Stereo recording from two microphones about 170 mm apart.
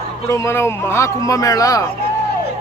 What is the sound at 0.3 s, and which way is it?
Speech, 15° left (ahead or behind).